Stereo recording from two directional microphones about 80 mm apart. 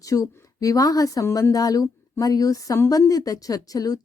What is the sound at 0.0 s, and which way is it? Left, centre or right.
A woman's voice, left.